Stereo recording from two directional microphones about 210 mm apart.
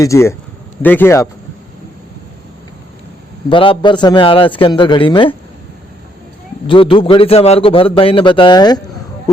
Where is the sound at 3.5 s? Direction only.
25° left (ahead or behind).